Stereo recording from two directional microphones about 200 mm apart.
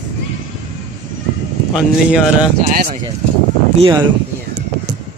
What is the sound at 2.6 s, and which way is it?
Speech, 45° right (ahead or behind).